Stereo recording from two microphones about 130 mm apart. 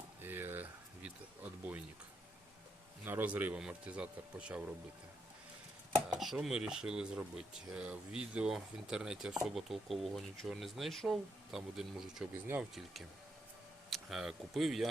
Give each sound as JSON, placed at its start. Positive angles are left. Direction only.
{"t": 0.2, "sound": "a sound", "side_deg": -15}
{"t": 3.0, "sound": "speech", "side_deg": -15}
{"t": 6.1, "sound": "speech", "side_deg": -5}
{"t": 12.3, "sound": "speech", "side_deg": -20}
{"t": 12.7, "sound": "speech", "side_deg": 0}